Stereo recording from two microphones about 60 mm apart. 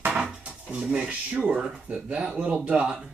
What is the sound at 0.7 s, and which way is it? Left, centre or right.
Speech, right.